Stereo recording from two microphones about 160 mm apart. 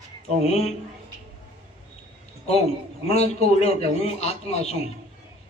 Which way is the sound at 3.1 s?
40° left (ahead or behind).